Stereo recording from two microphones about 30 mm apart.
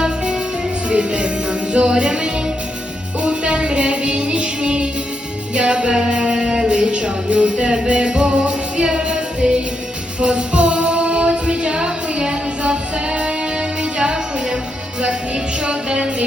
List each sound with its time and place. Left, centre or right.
0.9 s music: right
15.6 s music: right